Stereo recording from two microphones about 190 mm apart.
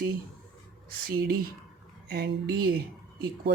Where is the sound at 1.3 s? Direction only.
50° right (ahead or behind).